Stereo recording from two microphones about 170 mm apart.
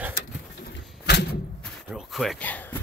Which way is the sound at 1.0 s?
75° left (ahead or behind).